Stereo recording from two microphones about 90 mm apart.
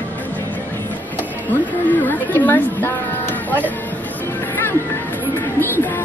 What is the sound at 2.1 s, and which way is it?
Speech, 20° left (ahead or behind).